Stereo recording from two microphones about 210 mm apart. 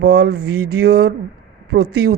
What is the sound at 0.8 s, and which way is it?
Speech, 50° right (ahead or behind).